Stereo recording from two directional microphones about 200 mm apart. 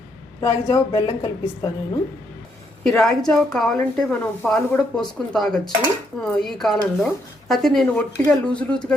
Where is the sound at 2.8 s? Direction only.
5° left (ahead or behind).